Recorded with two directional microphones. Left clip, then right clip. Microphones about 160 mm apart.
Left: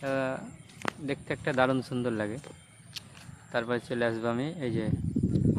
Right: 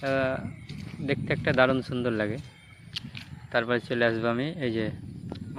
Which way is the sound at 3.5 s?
10° right (ahead or behind).